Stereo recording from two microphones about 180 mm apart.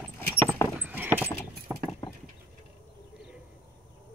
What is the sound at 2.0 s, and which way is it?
Vehicle, 25° left (ahead or behind).